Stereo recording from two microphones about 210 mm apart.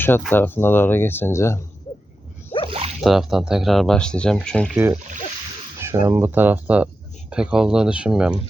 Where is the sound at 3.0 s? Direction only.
Centre (ahead or behind).